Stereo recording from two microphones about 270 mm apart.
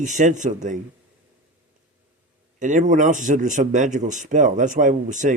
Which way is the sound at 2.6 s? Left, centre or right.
Right.